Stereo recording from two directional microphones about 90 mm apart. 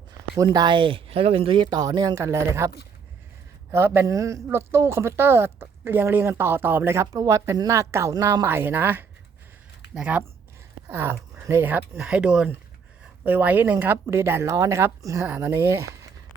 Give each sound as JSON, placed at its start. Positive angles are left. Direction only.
{"t": 0.5, "sound": "speech", "side_deg": -55}
{"t": 8.4, "sound": "speech", "side_deg": -25}
{"t": 10.8, "sound": "speech", "side_deg": -25}
{"t": 12.0, "sound": "speech", "side_deg": -10}